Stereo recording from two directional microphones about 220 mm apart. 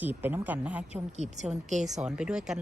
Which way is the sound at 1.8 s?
5° right (ahead or behind).